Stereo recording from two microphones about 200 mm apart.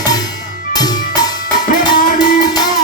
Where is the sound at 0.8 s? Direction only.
20° left (ahead or behind).